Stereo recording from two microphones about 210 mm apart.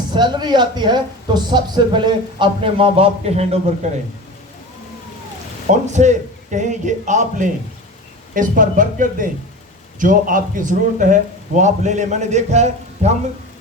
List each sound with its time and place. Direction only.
0.1 s speech: 20° right (ahead or behind)
5.9 s a man's voice: 35° right (ahead or behind)